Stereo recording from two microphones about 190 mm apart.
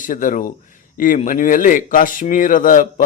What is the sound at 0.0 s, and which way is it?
Speech, 45° left (ahead or behind).